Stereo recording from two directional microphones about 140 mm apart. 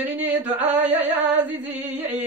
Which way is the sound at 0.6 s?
10° right (ahead or behind).